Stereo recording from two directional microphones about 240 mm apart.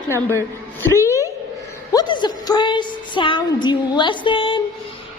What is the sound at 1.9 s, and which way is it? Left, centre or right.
Music, centre.